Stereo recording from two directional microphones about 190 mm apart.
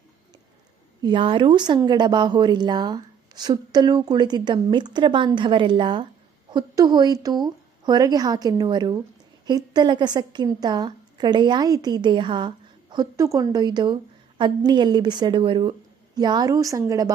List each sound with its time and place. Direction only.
1.0 s a woman's voice: 25° right (ahead or behind)